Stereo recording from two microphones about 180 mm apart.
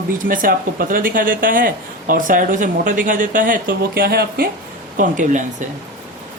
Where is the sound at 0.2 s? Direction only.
50° right (ahead or behind).